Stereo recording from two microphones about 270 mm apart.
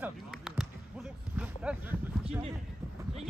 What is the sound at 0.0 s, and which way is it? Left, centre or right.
Basketball bounce, centre.